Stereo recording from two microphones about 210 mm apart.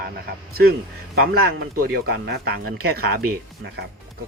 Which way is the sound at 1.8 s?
50° right (ahead or behind).